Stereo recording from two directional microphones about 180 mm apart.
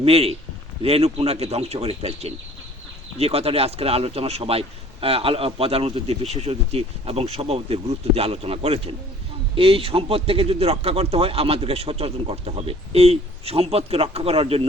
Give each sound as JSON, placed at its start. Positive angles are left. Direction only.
{"t": 0.0, "sound": "speech", "side_deg": -35}